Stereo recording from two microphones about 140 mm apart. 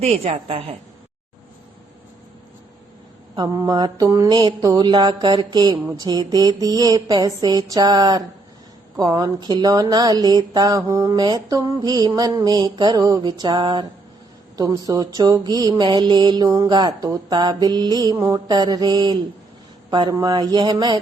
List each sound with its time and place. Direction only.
0.0 s a woman's voice: 45° right (ahead or behind)
3.3 s mantra: 30° right (ahead or behind)
19.9 s speech: 30° right (ahead or behind)